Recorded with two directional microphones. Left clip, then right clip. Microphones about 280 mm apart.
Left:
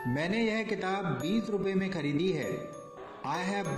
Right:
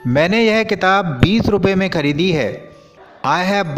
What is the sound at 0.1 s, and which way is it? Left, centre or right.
A man's voice, right.